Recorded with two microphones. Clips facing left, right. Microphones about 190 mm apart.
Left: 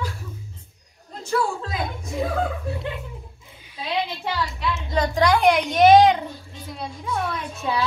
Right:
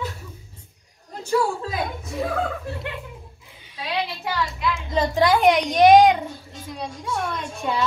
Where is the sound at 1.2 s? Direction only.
10° right (ahead or behind).